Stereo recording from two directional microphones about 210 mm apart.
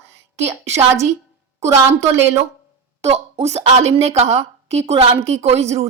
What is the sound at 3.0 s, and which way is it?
A woman's voice, 30° right (ahead or behind).